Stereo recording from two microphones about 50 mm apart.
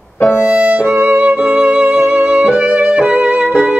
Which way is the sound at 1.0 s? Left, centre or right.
Right.